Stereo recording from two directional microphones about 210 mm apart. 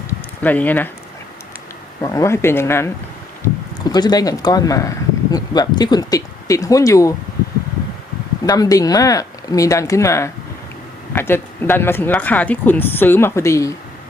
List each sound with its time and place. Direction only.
0.4 s speech: 10° left (ahead or behind)
2.0 s speech: 15° left (ahead or behind)
8.4 s speech: 15° left (ahead or behind)